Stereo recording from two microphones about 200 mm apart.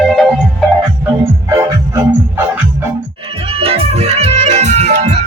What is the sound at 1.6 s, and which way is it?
Music, 15° right (ahead or behind).